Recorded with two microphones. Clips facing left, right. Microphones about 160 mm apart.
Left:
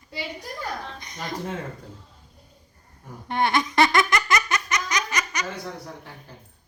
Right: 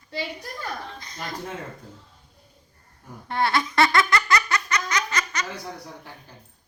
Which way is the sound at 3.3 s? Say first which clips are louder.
Left 1 dB; 20° left (ahead or behind).